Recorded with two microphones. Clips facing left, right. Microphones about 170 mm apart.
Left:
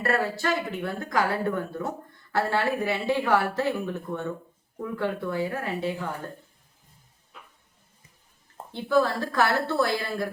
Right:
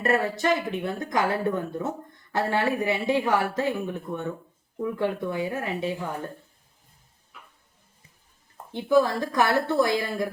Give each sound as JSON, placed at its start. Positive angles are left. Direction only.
{"t": 0.0, "sound": "speech", "side_deg": -20}
{"t": 8.7, "sound": "speech", "side_deg": -15}